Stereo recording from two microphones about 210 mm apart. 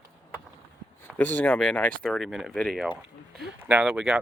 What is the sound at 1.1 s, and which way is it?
Speech, 10° left (ahead or behind).